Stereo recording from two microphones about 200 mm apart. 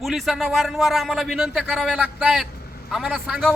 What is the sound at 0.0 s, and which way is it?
Speech, centre (ahead or behind).